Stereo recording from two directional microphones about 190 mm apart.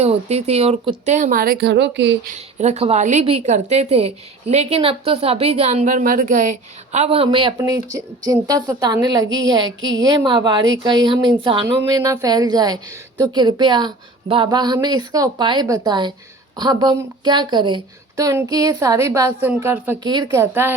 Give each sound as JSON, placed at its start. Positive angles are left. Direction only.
{"t": 0.0, "sound": "a woman's voice", "side_deg": -35}
{"t": 2.6, "sound": "a woman's voice", "side_deg": -35}
{"t": 20.0, "sound": "a woman's voice", "side_deg": -25}